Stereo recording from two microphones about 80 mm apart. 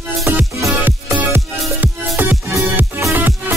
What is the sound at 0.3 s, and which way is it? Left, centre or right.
Music, right.